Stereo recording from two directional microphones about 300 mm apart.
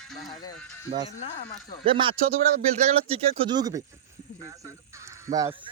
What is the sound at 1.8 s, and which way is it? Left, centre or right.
Speech, centre.